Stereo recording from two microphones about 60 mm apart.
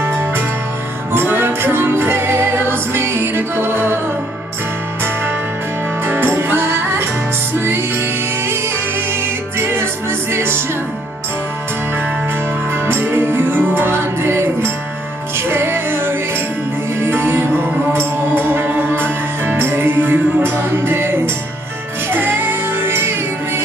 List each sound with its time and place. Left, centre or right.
1.1 s music: right
6.0 s music: right
9.6 s music: right
12.8 s music: right